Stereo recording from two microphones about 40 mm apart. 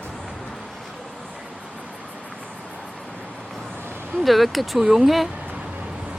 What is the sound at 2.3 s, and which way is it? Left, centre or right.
Vehicle, left.